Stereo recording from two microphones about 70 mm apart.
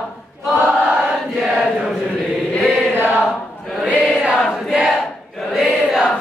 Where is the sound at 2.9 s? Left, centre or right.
Right.